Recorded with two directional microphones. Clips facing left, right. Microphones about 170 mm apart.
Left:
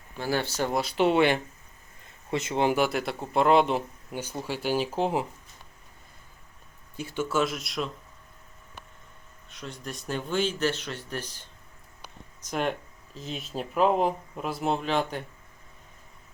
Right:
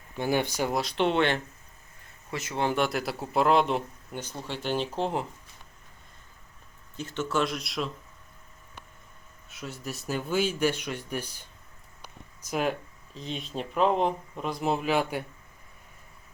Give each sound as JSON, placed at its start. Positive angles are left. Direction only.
{"t": 0.2, "sound": "speech", "side_deg": -15}
{"t": 0.7, "sound": "speech", "side_deg": 0}
{"t": 2.3, "sound": "speech", "side_deg": 25}
{"t": 2.7, "sound": "speech", "side_deg": 0}
{"t": 6.9, "sound": "speech", "side_deg": 10}
{"t": 9.5, "sound": "speech", "side_deg": -5}